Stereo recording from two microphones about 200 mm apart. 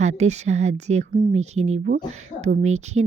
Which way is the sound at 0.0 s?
35° right (ahead or behind).